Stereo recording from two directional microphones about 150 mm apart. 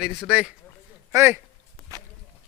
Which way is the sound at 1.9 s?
20° right (ahead or behind).